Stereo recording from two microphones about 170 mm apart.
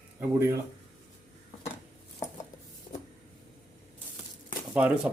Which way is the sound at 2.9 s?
35° left (ahead or behind).